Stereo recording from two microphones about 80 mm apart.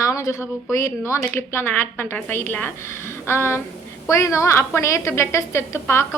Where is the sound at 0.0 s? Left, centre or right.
Left.